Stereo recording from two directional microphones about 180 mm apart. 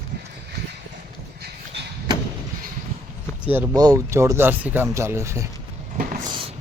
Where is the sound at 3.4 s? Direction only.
10° right (ahead or behind).